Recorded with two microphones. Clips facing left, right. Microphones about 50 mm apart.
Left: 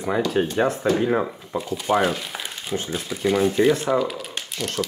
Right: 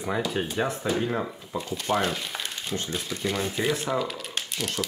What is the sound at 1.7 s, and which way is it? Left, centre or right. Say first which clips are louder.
Speech: left 5 dB; centre.